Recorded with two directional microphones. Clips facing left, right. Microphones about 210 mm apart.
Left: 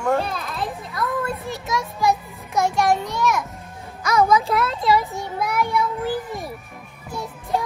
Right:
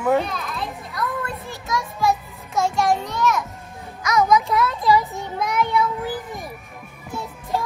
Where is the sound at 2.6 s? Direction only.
20° left (ahead or behind).